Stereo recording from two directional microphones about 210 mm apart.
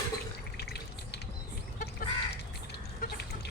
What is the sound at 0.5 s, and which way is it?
Drip, 50° left (ahead or behind).